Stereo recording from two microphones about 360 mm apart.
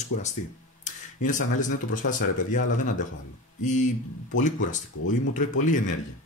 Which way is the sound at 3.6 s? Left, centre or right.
Centre.